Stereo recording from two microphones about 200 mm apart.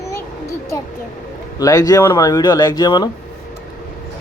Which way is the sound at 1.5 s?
20° left (ahead or behind).